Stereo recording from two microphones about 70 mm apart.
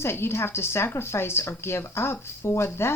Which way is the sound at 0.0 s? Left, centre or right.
Left.